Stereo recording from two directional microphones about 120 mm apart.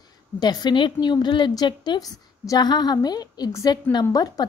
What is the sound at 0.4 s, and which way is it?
A woman's voice, 35° left (ahead or behind).